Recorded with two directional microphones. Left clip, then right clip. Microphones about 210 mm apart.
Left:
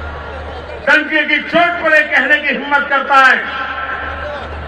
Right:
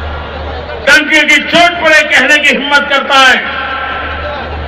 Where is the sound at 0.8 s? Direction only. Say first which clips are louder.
Right 6 dB; 45° right (ahead or behind).